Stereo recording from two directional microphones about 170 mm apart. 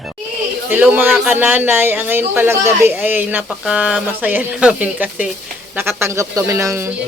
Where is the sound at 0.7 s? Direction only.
10° right (ahead or behind).